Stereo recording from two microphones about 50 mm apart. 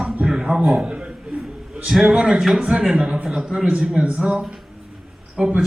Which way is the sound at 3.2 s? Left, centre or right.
Centre.